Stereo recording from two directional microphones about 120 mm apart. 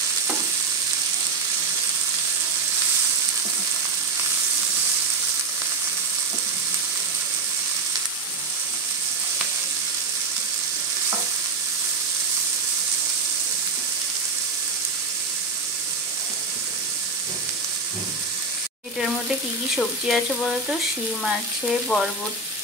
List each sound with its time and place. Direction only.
18.9 s frying: 5° right (ahead or behind)